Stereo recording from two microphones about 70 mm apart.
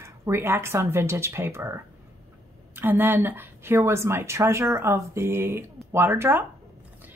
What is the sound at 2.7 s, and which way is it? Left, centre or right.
A woman's voice, right.